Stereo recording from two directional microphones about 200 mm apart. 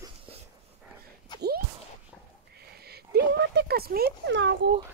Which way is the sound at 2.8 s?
50° right (ahead or behind).